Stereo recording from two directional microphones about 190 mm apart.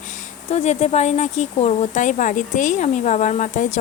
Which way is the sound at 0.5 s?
35° left (ahead or behind).